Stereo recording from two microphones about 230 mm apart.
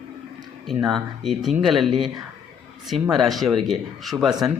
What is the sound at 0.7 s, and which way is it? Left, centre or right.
Speech, centre.